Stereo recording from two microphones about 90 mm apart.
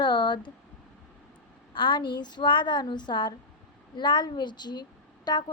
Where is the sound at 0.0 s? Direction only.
60° left (ahead or behind).